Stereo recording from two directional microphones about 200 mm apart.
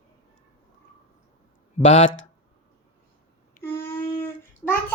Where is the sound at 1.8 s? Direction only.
35° left (ahead or behind).